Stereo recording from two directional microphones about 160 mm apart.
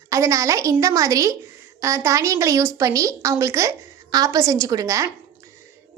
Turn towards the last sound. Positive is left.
turn(degrees=-20)  # may be behind; listen again after turning